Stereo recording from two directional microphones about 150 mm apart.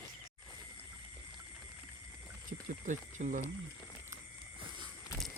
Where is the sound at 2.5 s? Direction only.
55° right (ahead or behind).